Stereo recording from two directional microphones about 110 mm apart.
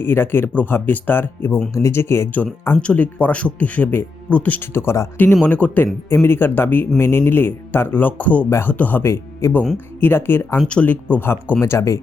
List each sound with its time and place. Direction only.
0.0 s speech: 20° left (ahead or behind)
10.6 s speech: 10° left (ahead or behind); by 11.9 s 25° left (ahead or behind)